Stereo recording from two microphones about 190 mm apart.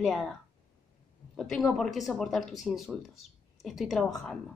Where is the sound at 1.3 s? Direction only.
Centre (ahead or behind).